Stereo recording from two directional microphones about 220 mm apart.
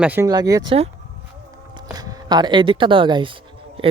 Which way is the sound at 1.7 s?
15° right (ahead or behind).